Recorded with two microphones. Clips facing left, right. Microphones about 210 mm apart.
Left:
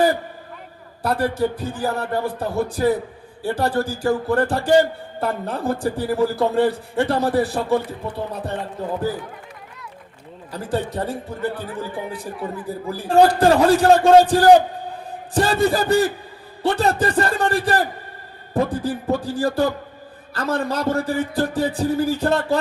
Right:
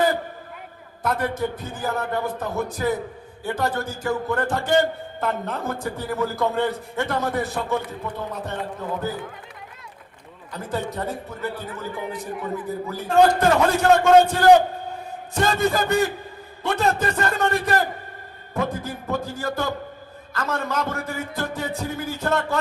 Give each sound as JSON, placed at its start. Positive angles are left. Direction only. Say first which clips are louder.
{"t": 1.0, "sound": "a man's voice", "louder": "left 4 dB", "side_deg": 35}
{"t": 10.5, "sound": "a man's voice", "louder": "left 4 dB", "side_deg": 35}